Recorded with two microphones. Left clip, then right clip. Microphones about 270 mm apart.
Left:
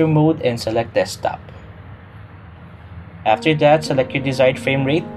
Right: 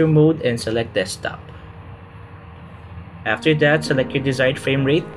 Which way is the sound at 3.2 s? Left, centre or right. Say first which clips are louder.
Left 3 dB; centre.